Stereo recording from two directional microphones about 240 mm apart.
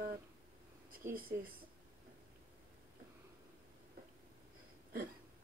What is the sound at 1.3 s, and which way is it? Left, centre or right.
Speech, right.